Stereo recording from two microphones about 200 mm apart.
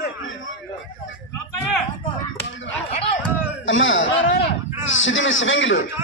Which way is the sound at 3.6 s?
70° left (ahead or behind).